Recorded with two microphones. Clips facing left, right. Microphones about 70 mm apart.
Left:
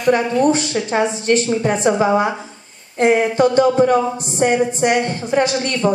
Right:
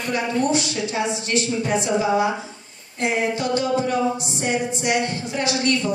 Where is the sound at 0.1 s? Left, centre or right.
Left.